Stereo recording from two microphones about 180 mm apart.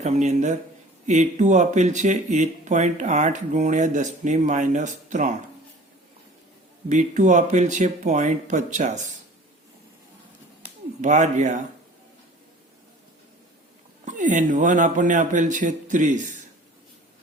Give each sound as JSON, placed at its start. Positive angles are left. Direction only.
{"t": 0.0, "sound": "speech", "side_deg": -40}
{"t": 6.8, "sound": "speech", "side_deg": -40}
{"t": 11.0, "sound": "speech", "side_deg": -40}
{"t": 14.0, "sound": "speech", "side_deg": -45}